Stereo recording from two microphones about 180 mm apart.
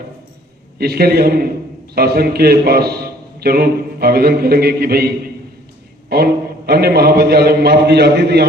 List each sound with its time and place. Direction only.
0.8 s a man's voice: 60° right (ahead or behind)
6.1 s a man's voice: 60° right (ahead or behind)